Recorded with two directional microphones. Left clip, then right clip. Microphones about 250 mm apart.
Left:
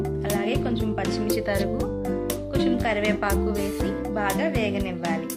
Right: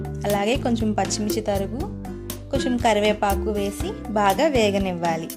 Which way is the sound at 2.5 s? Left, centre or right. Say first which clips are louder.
Right 5 dB; right.